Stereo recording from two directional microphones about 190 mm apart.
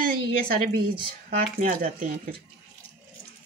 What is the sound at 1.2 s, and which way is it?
Speech, 45° right (ahead or behind).